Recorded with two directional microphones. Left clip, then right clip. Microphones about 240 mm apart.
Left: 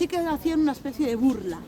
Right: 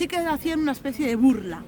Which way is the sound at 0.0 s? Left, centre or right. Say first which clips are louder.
Right 1 dB; right.